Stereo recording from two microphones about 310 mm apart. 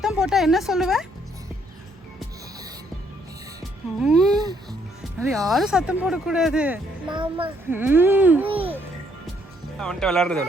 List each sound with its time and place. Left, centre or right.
0.0 s speech: centre
3.6 s speech: centre
7.1 s speech: centre
8.4 s a child's voice: centre
9.7 s speech: centre